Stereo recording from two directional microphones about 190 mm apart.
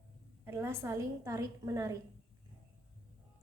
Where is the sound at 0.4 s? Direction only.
15° right (ahead or behind).